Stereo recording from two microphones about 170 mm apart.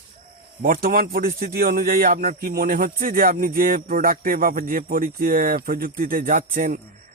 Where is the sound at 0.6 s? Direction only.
60° right (ahead or behind).